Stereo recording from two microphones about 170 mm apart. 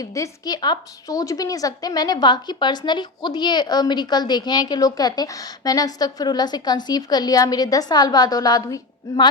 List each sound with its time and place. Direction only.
0.0 s a woman's voice: 20° left (ahead or behind)